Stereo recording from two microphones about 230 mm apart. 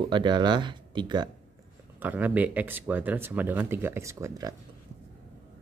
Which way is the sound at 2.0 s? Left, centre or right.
Centre.